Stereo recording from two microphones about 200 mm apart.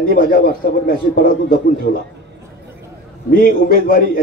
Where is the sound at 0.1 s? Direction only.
45° left (ahead or behind).